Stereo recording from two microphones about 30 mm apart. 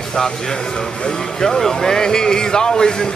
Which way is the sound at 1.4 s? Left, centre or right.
Centre.